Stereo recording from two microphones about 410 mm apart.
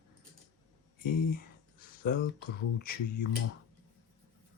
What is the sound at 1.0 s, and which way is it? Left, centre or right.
Speech, left.